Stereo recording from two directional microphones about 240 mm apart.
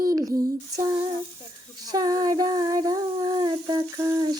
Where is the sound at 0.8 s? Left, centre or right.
Centre.